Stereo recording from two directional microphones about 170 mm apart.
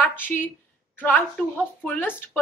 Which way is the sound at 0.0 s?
10° left (ahead or behind).